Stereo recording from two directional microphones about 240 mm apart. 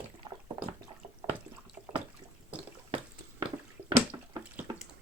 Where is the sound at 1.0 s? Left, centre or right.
Right.